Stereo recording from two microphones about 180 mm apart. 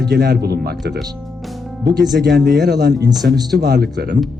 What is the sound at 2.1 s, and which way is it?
Speech, 60° right (ahead or behind).